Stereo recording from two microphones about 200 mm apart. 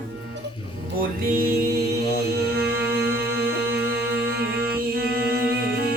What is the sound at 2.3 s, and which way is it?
Music, 50° right (ahead or behind).